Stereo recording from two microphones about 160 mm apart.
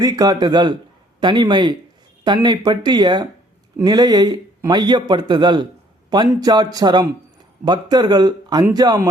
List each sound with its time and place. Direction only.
0.0 s a man's voice: 25° right (ahead or behind)